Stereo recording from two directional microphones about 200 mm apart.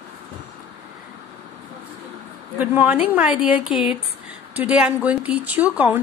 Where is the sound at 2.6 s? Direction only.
10° right (ahead or behind).